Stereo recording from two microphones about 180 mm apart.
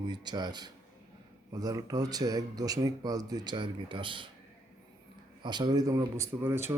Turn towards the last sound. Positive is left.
turn(degrees=-15)  # may be behind; listen again after turning